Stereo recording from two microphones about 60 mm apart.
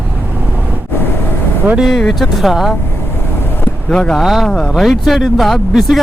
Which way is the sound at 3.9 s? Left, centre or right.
Centre.